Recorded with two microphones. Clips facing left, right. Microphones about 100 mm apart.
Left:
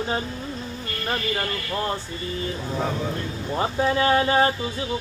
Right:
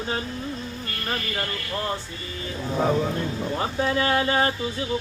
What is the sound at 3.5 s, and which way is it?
Speech, 25° left (ahead or behind).